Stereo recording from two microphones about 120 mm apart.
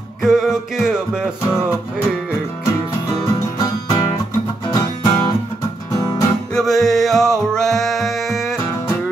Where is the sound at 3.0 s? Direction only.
30° left (ahead or behind).